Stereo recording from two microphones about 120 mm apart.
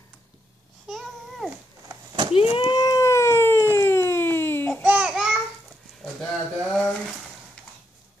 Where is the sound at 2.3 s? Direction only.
50° left (ahead or behind); by 3.6 s 20° left (ahead or behind).